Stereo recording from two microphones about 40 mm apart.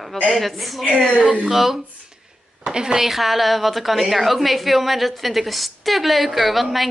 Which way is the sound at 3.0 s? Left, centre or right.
Centre.